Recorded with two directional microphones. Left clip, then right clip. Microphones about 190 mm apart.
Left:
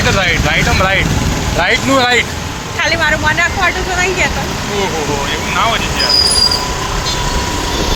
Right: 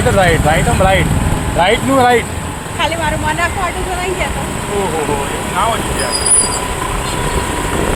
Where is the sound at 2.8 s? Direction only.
10° left (ahead or behind).